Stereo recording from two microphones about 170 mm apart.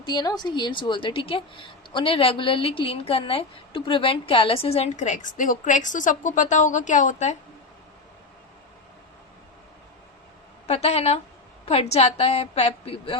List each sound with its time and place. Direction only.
0.0 s a woman's voice: 25° left (ahead or behind); by 7.3 s 45° left (ahead or behind)
10.7 s a woman's voice: 40° left (ahead or behind)